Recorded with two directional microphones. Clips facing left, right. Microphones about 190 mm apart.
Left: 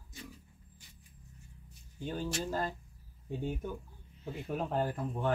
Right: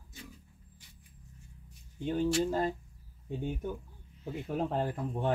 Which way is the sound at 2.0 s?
20° right (ahead or behind).